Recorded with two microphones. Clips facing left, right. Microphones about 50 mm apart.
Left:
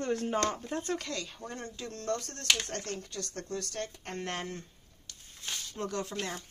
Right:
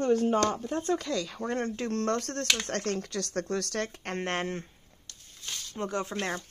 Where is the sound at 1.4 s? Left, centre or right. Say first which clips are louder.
Right 10 dB; right.